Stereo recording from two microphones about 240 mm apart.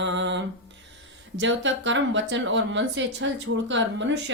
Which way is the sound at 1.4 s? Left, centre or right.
Right.